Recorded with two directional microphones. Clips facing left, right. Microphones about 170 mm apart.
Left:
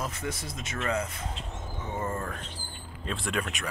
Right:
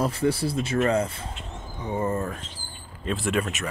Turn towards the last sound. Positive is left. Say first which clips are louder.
# right 6 dB
turn(degrees=-5)  # may be behind; listen again after turning